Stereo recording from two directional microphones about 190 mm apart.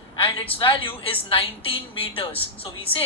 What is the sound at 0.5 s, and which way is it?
A woman's voice, 25° left (ahead or behind).